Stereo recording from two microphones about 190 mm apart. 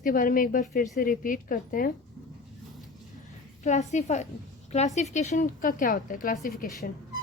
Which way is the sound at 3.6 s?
40° left (ahead or behind).